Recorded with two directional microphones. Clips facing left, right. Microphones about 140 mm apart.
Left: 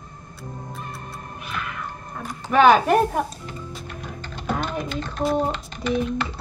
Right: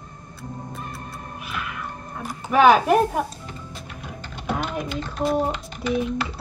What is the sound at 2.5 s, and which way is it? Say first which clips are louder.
Speech: even; 5° right (ahead or behind).